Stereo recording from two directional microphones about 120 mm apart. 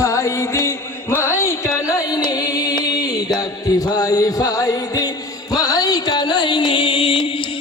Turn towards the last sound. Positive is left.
turn(degrees=45)  # may be behind; listen again after turning